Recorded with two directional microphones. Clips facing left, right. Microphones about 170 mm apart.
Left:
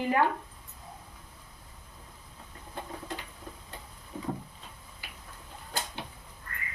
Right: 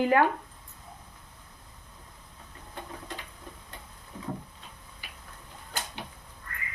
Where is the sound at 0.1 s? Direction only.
75° right (ahead or behind).